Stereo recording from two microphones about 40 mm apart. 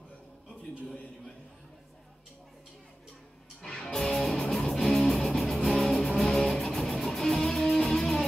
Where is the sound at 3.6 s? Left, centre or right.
Centre.